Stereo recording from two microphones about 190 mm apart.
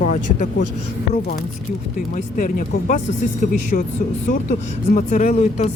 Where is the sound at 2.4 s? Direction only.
45° left (ahead or behind).